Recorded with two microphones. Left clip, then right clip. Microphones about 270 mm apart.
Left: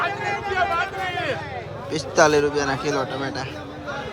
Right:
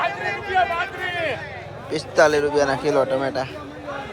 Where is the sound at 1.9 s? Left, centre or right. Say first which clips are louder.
Even; centre.